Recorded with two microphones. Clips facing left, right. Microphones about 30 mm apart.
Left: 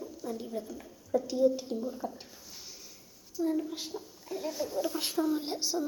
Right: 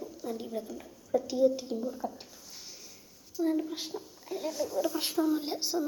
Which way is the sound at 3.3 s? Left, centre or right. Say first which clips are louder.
Right 1 dB; centre.